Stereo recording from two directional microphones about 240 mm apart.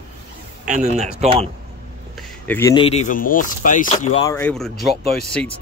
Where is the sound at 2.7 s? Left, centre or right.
Left.